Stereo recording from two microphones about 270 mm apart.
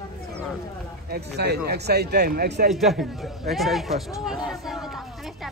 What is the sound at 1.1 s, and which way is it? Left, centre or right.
Speech, right.